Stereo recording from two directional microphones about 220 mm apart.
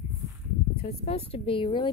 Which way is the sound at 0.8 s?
30° left (ahead or behind).